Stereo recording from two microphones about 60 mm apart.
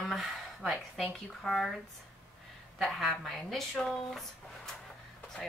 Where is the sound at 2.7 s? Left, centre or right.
Centre.